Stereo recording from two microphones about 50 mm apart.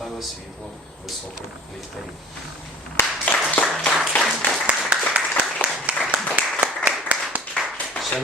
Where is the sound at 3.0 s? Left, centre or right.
Left.